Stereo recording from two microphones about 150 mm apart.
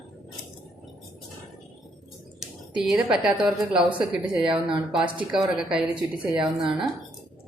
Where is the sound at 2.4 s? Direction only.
5° right (ahead or behind).